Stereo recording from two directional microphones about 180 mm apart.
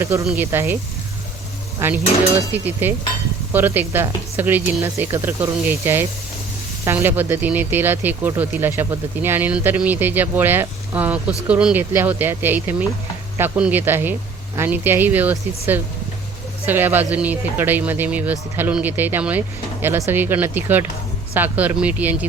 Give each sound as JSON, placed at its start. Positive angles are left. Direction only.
{"t": 0.0, "sound": "speech", "side_deg": -15}
{"t": 1.8, "sound": "speech", "side_deg": -15}